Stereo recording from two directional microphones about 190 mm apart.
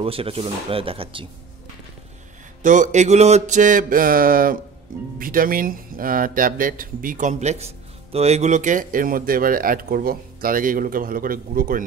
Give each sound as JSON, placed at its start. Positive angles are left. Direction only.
{"t": 0.0, "sound": "speech", "side_deg": -30}
{"t": 2.6, "sound": "music", "side_deg": -40}
{"t": 4.9, "sound": "speech", "side_deg": -50}